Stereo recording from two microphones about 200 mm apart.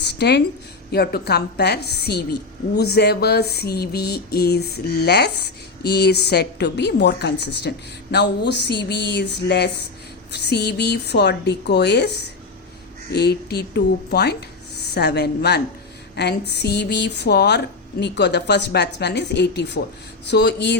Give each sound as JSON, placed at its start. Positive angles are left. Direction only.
{"t": 0.0, "sound": "a woman's voice", "side_deg": 55}